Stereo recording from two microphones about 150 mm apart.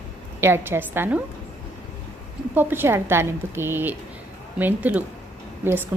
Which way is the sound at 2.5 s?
15° right (ahead or behind).